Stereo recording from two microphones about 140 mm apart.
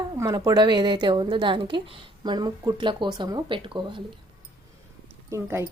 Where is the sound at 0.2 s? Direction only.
25° right (ahead or behind).